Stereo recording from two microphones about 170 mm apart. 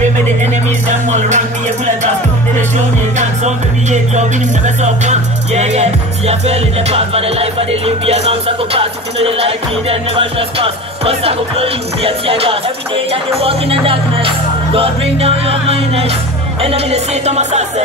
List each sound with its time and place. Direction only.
0.8 s music: 45° right (ahead or behind)
3.2 s music: 45° right (ahead or behind)